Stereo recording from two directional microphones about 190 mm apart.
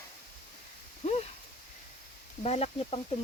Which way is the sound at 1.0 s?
35° left (ahead or behind).